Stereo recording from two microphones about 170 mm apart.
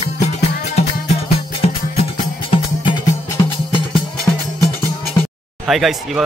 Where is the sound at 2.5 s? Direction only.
30° left (ahead or behind).